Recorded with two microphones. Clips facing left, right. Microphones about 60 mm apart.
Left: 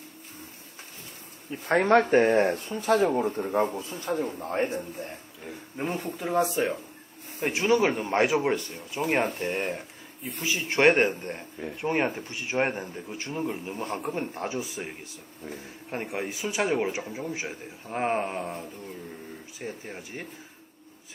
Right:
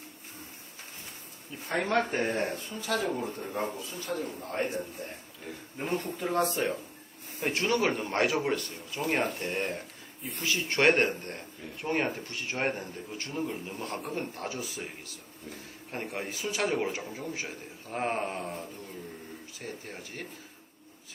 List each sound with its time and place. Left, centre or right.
1.5 s speech: left
2.2 s a man's voice: left
2.5 s speech: left
3.3 s a man's voice: left
5.5 s speech: centre
9.0 s speech: centre
9.4 s speech: centre